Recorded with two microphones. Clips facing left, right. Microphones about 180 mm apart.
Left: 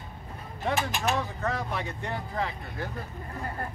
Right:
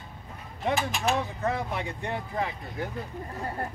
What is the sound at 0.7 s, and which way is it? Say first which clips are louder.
Speech: even; centre (ahead or behind).